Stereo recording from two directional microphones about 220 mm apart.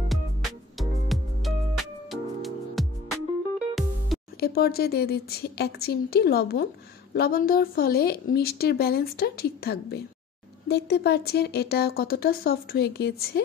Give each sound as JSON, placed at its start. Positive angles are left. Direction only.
{"t": 0.1, "sound": "music", "side_deg": 0}
{"t": 4.4, "sound": "speech", "side_deg": 45}